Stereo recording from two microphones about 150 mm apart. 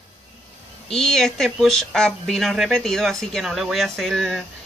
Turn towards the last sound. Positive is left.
turn(degrees=0)  # may be behind; listen again after turning